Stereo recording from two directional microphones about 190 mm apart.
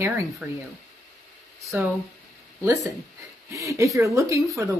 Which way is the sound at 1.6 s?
Centre (ahead or behind).